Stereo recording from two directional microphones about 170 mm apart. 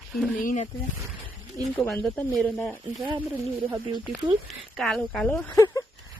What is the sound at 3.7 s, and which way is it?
Speech, 25° right (ahead or behind).